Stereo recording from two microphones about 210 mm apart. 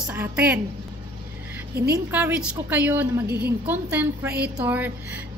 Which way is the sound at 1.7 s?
50° right (ahead or behind).